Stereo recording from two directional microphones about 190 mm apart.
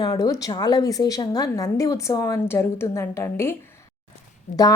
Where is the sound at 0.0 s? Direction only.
20° left (ahead or behind).